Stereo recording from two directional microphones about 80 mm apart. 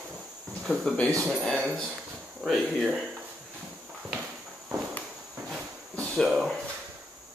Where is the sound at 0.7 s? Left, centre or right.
Centre.